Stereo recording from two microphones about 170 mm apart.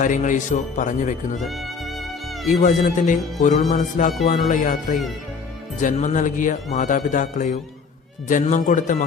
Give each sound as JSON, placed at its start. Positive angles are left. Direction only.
{"t": 0.0, "sound": "speech", "side_deg": 50}
{"t": 1.4, "sound": "music", "side_deg": 0}
{"t": 2.5, "sound": "speech", "side_deg": 45}